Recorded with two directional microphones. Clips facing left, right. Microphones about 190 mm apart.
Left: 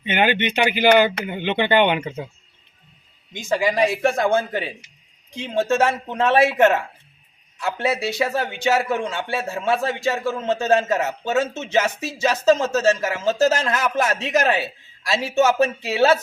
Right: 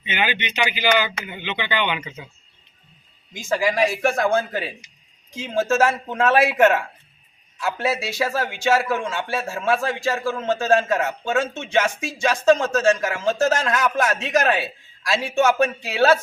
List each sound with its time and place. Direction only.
0.0 s speech: 55° left (ahead or behind)
3.6 s a man's voice: centre (ahead or behind)